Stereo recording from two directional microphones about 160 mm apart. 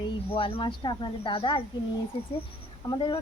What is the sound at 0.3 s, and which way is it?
Speech, 35° left (ahead or behind).